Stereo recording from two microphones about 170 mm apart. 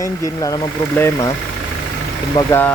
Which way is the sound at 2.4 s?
15° left (ahead or behind).